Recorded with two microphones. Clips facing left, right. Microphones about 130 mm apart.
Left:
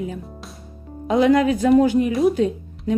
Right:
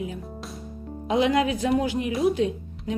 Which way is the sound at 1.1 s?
45° left (ahead or behind).